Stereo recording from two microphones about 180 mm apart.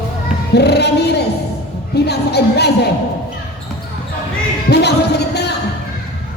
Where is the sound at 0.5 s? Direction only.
65° left (ahead or behind).